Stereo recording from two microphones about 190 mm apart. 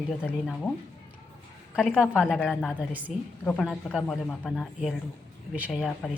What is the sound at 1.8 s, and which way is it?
Speech, 5° right (ahead or behind).